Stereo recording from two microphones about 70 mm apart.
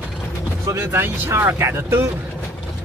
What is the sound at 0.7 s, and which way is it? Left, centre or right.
Speech, right.